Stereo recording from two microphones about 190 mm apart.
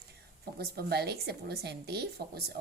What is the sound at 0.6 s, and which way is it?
A woman's voice, 55° right (ahead or behind).